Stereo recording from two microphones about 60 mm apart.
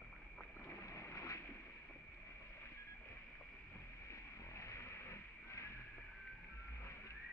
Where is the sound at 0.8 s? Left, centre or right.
Left.